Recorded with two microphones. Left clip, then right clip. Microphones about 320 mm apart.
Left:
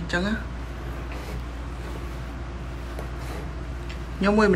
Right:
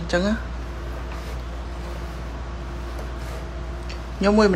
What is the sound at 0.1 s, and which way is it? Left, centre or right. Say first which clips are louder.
Speech: right 4 dB; centre.